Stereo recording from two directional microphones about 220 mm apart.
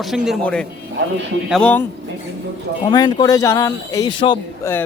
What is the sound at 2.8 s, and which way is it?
A man's voice, 20° left (ahead or behind).